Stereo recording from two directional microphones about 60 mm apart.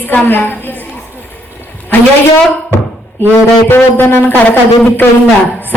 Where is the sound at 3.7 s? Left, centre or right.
Left.